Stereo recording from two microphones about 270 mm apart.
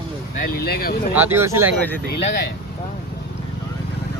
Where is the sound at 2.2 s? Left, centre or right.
Left.